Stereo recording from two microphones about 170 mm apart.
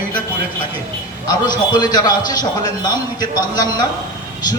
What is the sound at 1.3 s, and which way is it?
A man's voice, 25° left (ahead or behind).